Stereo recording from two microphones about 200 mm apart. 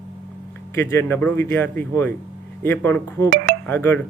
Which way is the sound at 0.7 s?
15° left (ahead or behind).